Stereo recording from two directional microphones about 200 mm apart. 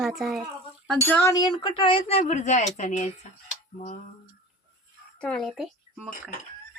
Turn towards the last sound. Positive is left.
turn(degrees=-5)  # may be behind; listen again after turning